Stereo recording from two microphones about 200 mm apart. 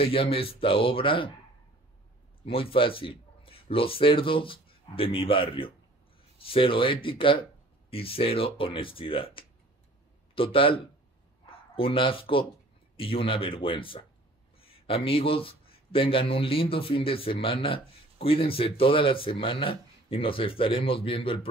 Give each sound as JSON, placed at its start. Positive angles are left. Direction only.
{"t": 0.0, "sound": "speech", "side_deg": 25}
{"t": 2.4, "sound": "speech", "side_deg": 25}